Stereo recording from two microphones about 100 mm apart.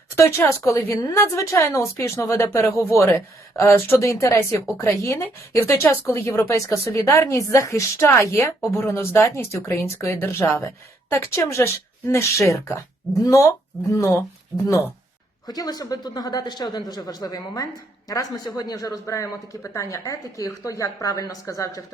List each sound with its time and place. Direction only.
0.2 s speech: 30° left (ahead or behind)
14.5 s speech: 20° right (ahead or behind)
15.4 s speech: 40° left (ahead or behind)